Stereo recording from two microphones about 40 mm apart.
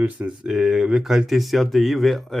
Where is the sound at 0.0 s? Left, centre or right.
Right.